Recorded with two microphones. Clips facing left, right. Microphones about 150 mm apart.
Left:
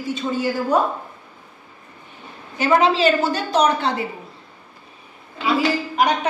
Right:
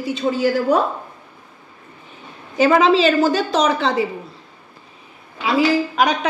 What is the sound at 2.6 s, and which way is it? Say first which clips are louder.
A woman's voice: right 3 dB; 90° right.